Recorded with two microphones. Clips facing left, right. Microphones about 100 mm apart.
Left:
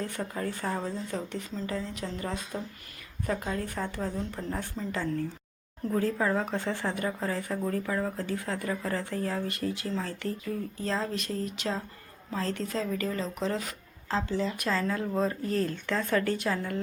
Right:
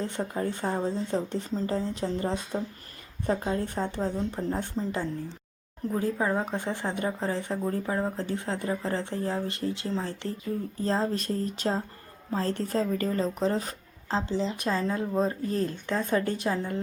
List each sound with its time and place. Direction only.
0.0 s speech: 25° right (ahead or behind)